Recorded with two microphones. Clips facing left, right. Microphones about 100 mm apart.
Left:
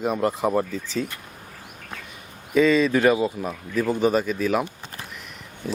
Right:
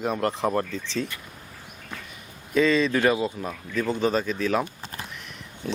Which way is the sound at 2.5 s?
5° left (ahead or behind).